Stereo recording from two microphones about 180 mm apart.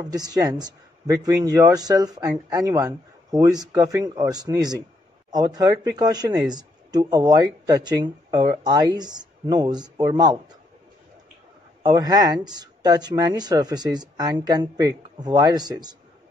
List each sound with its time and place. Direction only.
0.1 s speech: 20° right (ahead or behind)
11.8 s speech: 20° right (ahead or behind)